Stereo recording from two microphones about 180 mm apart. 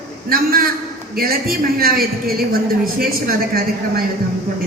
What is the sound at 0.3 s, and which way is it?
A woman's voice, 55° right (ahead or behind).